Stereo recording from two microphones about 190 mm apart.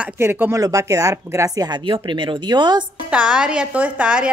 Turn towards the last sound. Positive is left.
turn(degrees=-5)  # may be behind; listen again after turning